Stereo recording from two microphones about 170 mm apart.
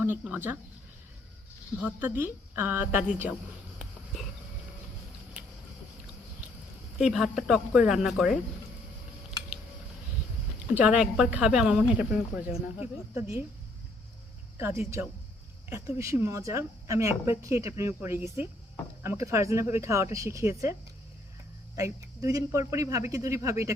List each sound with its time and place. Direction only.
0.0 s speech: 10° right (ahead or behind)
1.8 s a woman's voice: 10° right (ahead or behind)
3.8 s a sound: centre (ahead or behind)
7.0 s a woman's voice: centre (ahead or behind)
10.8 s a woman's voice: 5° right (ahead or behind)
12.5 s speech: 35° left (ahead or behind)
13.1 s a woman's voice: 15° right (ahead or behind)
15.7 s a woman's voice: 15° right (ahead or behind)
21.8 s speech: 20° right (ahead or behind)